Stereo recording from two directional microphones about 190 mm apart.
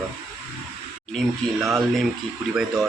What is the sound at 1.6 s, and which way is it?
Speech, centre (ahead or behind).